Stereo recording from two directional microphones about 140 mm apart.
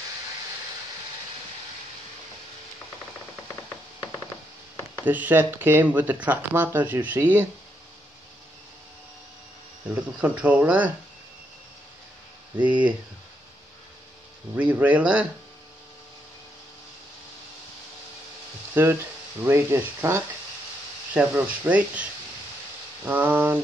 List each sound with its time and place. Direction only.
5.0 s speech: 10° right (ahead or behind)
9.9 s speech: 10° right (ahead or behind)
12.5 s speech: 10° right (ahead or behind)
14.5 s speech: 10° right (ahead or behind)
18.8 s speech: 15° right (ahead or behind)
23.0 s speech: 15° right (ahead or behind)